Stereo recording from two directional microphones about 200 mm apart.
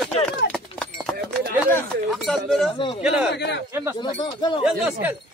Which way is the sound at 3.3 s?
60° left (ahead or behind).